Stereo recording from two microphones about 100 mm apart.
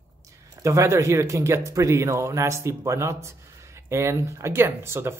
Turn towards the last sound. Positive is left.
turn(degrees=-25)  # may be behind; listen again after turning